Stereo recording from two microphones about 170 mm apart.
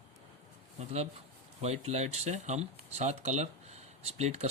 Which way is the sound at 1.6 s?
40° right (ahead or behind).